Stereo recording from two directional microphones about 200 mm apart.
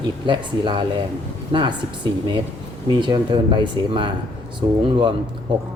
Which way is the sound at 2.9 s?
20° right (ahead or behind).